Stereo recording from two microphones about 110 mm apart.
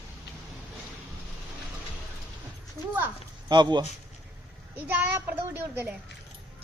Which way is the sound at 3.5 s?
40° right (ahead or behind).